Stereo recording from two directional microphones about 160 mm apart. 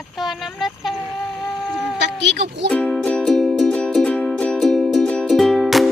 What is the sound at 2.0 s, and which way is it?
Speech, 90° right.